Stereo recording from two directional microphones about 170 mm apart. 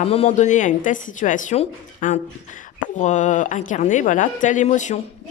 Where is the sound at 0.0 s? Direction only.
35° left (ahead or behind).